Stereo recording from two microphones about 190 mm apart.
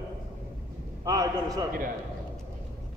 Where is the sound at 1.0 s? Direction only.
20° right (ahead or behind).